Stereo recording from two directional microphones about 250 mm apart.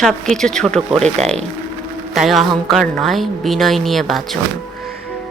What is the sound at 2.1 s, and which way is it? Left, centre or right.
A woman's voice, centre.